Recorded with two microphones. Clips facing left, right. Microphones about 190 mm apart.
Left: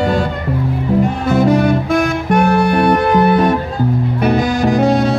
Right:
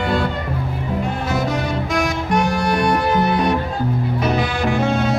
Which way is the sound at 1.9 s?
60° left (ahead or behind).